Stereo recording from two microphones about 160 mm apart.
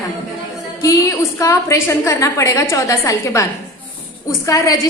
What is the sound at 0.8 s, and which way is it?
A woman's voice, 20° left (ahead or behind).